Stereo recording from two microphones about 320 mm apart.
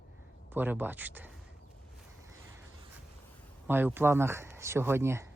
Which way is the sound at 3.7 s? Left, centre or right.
Centre.